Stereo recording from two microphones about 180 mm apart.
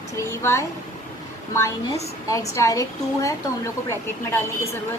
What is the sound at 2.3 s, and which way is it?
A woman's voice, 20° left (ahead or behind).